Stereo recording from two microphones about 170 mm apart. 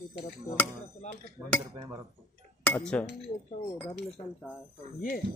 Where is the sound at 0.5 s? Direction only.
20° left (ahead or behind).